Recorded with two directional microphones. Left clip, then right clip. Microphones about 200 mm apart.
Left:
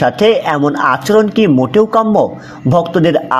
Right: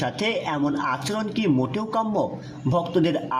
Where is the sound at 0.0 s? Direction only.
30° left (ahead or behind).